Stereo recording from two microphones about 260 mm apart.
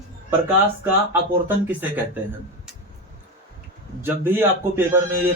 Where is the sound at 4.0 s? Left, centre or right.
Centre.